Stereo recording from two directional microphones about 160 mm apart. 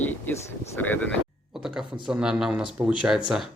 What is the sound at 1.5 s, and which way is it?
Speech, 5° right (ahead or behind).